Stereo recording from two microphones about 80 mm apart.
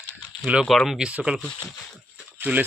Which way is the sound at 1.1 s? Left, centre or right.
Centre.